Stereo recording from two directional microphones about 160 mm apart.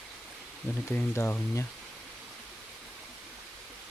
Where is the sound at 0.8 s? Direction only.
15° left (ahead or behind).